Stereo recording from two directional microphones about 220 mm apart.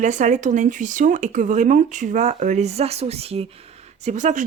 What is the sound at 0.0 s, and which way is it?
Speech, 35° right (ahead or behind).